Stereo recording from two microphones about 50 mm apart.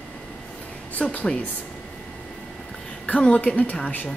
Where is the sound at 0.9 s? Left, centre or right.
Left.